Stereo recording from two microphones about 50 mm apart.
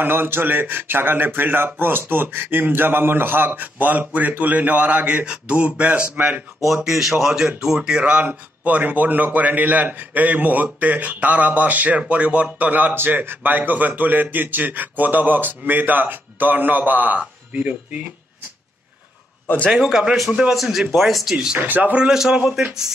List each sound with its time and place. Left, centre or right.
0.0 s speech: right
6.9 s speech: centre
8.0 s speech: right
12.9 s speech: right
20.2 s speech: centre
20.5 s speech: centre
21.5 s speech: right
21.9 s speech: centre